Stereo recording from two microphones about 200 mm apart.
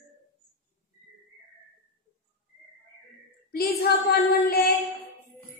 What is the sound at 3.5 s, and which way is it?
Female singing, 50° left (ahead or behind).